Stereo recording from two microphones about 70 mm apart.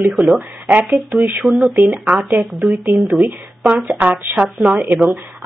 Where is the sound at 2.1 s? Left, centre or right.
Centre.